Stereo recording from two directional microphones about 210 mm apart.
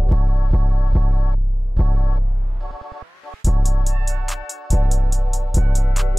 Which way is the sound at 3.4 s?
Centre (ahead or behind).